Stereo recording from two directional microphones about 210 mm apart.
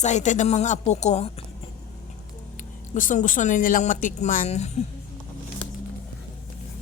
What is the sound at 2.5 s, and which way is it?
Speech, 40° left (ahead or behind).